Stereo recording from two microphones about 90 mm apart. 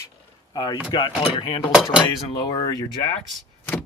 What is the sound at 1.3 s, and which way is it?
Speech, 90° left.